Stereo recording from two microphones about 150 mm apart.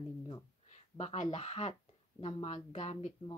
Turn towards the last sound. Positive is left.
turn(degrees=50)  # may be behind; listen again after turning